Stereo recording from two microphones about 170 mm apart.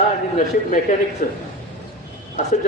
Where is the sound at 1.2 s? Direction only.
50° left (ahead or behind).